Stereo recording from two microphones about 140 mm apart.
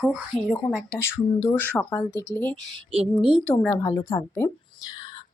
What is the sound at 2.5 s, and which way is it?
Speech, 40° right (ahead or behind).